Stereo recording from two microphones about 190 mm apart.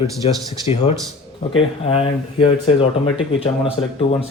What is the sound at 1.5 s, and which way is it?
Speech, 30° left (ahead or behind).